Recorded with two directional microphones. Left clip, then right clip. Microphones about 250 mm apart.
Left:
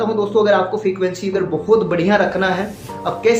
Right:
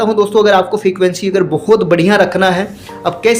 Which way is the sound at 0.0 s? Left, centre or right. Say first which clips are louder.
Right 6 dB; right.